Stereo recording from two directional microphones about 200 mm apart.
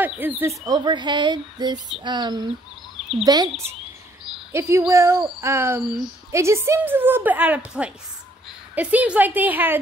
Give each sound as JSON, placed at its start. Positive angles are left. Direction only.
{"t": 0.0, "sound": "speech", "side_deg": -10}
{"t": 4.5, "sound": "a woman's voice", "side_deg": -15}